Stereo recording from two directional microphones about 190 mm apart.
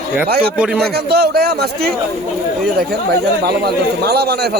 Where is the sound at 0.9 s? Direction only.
55° right (ahead or behind).